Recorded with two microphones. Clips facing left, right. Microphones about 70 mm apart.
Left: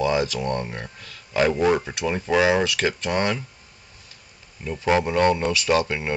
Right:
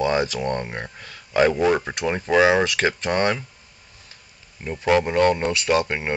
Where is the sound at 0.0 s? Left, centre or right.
Right.